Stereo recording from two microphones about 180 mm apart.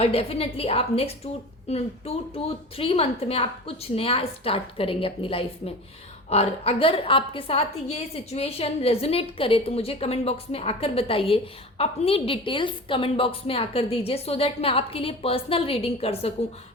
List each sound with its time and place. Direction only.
0.0 s a woman's voice: 35° left (ahead or behind)